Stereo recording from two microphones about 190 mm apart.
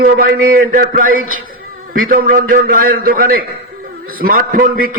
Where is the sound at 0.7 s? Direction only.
45° right (ahead or behind).